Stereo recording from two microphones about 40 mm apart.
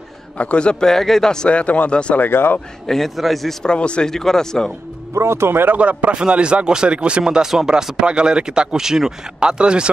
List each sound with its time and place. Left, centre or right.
0.4 s speech: left
0.8 s a man's voice: centre
1.5 s speech: left
2.1 s speech: left
3.2 s a man's voice: centre
3.6 s speech: left
4.1 s a man's voice: centre
5.4 s speech: right
5.8 s speech: right
7.4 s speech: centre
9.4 s speech: right